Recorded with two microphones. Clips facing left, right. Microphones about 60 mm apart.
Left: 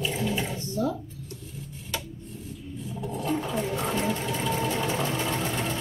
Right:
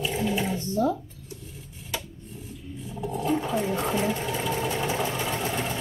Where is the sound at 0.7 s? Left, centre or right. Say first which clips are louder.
Right 3 dB; right.